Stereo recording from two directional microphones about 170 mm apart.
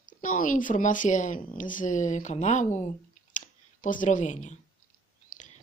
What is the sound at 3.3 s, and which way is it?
Clicking, 50° left (ahead or behind).